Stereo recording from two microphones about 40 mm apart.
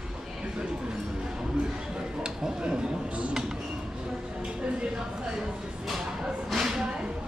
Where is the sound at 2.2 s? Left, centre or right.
Centre.